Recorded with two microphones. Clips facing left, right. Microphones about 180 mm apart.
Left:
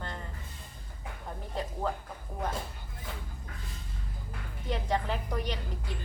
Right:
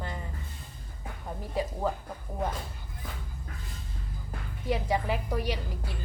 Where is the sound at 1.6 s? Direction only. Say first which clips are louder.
Right 5 dB; 10° right (ahead or behind).